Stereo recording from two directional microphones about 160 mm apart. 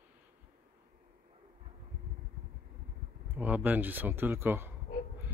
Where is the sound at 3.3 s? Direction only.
10° right (ahead or behind).